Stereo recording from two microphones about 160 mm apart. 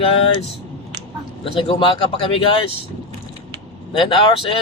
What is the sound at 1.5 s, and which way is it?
Speech, 35° left (ahead or behind).